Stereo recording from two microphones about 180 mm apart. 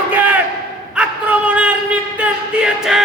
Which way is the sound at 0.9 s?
5° right (ahead or behind).